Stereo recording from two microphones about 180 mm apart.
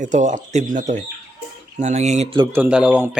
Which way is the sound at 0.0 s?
40° right (ahead or behind).